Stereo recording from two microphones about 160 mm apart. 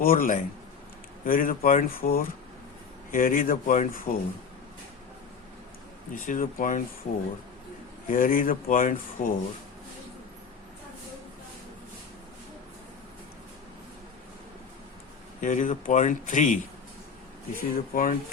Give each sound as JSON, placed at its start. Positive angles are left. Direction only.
{"t": 0.0, "sound": "speech", "side_deg": 60}
{"t": 6.1, "sound": "speech", "side_deg": 55}
{"t": 15.4, "sound": "speech", "side_deg": 55}